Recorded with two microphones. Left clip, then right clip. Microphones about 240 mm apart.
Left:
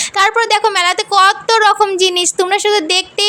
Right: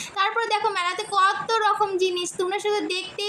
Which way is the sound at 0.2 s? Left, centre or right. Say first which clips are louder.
Left 11 dB; left.